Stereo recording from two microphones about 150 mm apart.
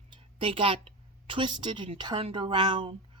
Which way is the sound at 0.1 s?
35° right (ahead or behind).